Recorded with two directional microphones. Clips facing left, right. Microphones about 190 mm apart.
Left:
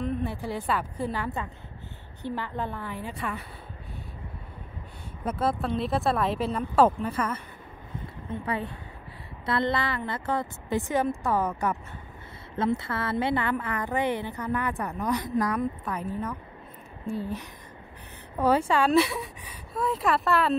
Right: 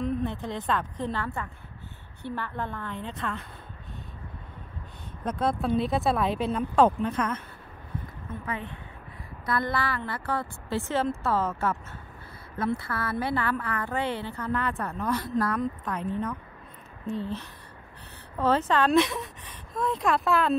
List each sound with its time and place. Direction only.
0.0 s speech: 5° left (ahead or behind)
5.2 s speech: 5° left (ahead or behind)
8.3 s speech: 35° left (ahead or behind)
9.5 s a woman's voice: 25° left (ahead or behind); by 20.5 s centre (ahead or behind)